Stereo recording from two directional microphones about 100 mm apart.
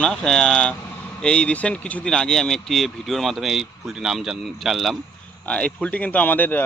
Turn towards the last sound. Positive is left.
turn(degrees=20)  # may be behind; listen again after turning